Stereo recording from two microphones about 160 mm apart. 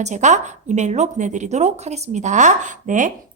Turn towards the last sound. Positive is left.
turn(degrees=-50)  # may be behind; listen again after turning